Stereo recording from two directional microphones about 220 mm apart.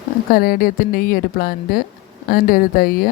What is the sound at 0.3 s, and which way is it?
Speech, 40° left (ahead or behind).